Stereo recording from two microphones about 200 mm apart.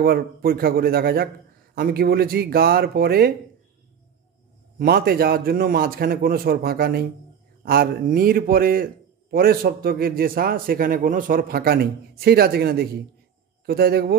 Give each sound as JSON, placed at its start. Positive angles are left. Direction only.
{"t": 0.0, "sound": "a man's voice", "side_deg": -50}
{"t": 4.7, "sound": "a man's voice", "side_deg": -50}